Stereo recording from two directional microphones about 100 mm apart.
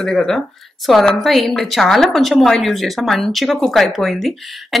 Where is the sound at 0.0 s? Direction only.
5° left (ahead or behind).